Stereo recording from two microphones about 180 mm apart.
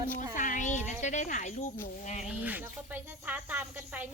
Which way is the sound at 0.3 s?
45° left (ahead or behind).